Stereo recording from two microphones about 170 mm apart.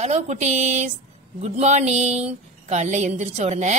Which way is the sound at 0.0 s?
40° right (ahead or behind).